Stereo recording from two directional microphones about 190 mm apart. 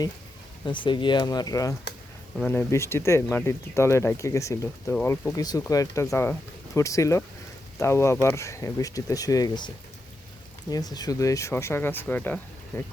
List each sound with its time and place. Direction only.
0.6 s speech: 25° left (ahead or behind); by 12.8 s 10° left (ahead or behind)